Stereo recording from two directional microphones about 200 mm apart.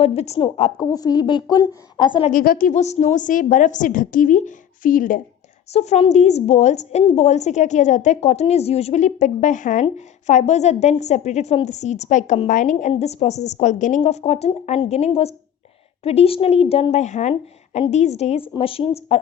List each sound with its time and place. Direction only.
0.0 s a woman's voice: 30° left (ahead or behind)
2.3 s a woman's voice: 45° left (ahead or behind); by 19.2 s 30° left (ahead or behind)